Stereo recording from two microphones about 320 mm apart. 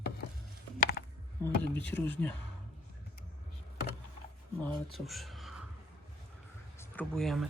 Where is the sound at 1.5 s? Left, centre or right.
Centre.